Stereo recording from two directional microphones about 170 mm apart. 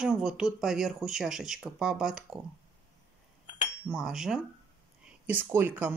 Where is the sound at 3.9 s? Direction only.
5° right (ahead or behind).